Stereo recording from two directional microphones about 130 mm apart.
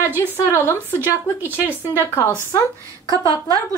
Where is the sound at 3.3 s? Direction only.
30° right (ahead or behind).